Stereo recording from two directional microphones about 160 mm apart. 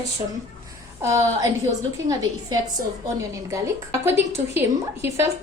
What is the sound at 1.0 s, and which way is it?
Speech, 20° right (ahead or behind).